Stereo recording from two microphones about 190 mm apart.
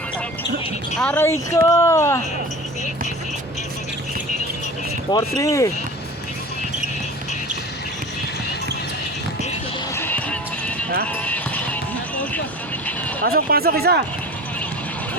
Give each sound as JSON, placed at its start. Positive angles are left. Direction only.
{"t": 0.9, "sound": "speech", "side_deg": 10}
{"t": 5.4, "sound": "speech", "side_deg": 15}
{"t": 9.9, "sound": "music", "side_deg": 10}
{"t": 11.1, "sound": "basketball bounce", "side_deg": 10}
{"t": 13.2, "sound": "speech", "side_deg": -55}